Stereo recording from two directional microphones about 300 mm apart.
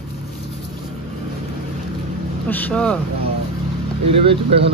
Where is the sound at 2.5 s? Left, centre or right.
Centre.